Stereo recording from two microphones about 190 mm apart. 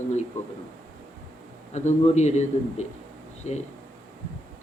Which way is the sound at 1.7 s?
35° left (ahead or behind).